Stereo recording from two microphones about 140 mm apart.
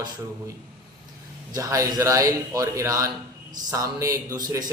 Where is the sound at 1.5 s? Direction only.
25° right (ahead or behind).